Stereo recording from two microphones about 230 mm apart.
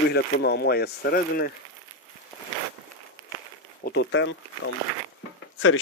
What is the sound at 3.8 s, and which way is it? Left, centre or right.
Speech, left.